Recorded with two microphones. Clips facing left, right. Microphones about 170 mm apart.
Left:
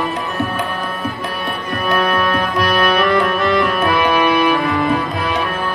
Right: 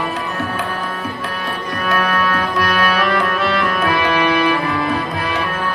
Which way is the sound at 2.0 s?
15° left (ahead or behind).